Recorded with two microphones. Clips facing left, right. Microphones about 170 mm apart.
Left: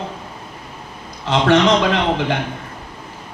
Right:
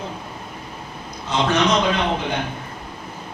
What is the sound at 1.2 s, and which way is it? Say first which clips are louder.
A man's voice: left 5 dB; 90° left.